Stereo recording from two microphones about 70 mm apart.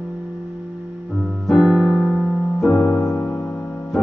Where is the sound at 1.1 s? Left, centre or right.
Centre.